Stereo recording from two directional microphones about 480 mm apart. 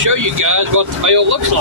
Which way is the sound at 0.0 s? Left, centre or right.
Right.